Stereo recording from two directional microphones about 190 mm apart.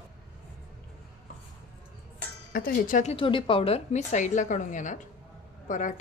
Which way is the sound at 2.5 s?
50° left (ahead or behind).